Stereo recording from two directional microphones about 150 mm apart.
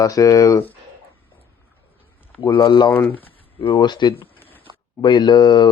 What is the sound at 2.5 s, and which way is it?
Speech, 30° left (ahead or behind).